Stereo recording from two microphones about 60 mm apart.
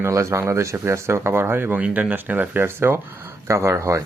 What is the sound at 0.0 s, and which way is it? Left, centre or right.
Speech, right.